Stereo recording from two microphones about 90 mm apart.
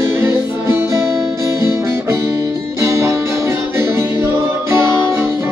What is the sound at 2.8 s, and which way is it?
Music, 35° right (ahead or behind).